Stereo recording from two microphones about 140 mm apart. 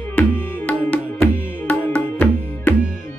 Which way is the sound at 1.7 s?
10° left (ahead or behind).